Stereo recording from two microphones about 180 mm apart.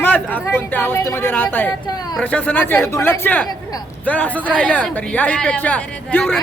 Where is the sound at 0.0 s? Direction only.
10° left (ahead or behind).